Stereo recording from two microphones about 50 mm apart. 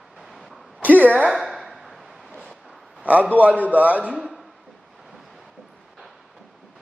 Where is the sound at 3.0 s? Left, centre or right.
Right.